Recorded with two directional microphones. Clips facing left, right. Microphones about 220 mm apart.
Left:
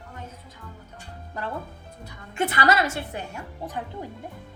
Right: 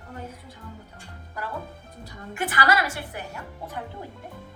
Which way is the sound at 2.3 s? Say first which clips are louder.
Left 2 dB; 25° left (ahead or behind).